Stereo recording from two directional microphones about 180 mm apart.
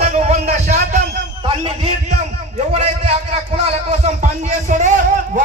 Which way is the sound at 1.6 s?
35° right (ahead or behind).